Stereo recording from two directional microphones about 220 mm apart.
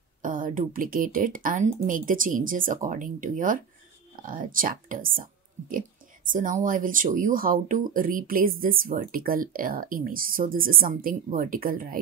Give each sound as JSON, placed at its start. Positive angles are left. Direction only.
{"t": 0.2, "sound": "speech", "side_deg": -40}
{"t": 6.3, "sound": "speech", "side_deg": -40}